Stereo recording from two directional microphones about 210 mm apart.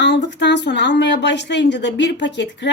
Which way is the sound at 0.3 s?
55° left (ahead or behind).